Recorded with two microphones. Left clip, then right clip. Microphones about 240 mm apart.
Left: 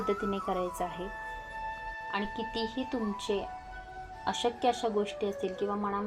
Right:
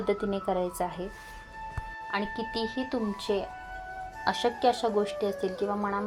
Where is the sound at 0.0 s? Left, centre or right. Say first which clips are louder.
Right 3 dB; right.